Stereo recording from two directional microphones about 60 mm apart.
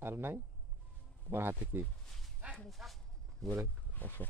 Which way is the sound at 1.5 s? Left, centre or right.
Right.